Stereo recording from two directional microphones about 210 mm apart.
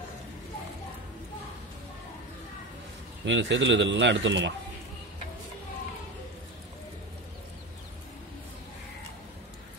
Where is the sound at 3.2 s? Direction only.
60° right (ahead or behind).